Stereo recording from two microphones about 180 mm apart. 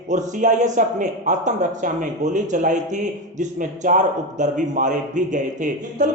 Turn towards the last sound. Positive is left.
turn(degrees=-45)  # may be behind; listen again after turning